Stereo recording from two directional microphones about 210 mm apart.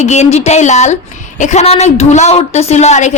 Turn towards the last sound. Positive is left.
turn(degrees=35)  # may be behind; listen again after turning